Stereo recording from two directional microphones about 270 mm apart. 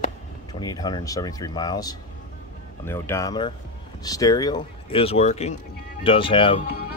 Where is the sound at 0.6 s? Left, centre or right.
Centre.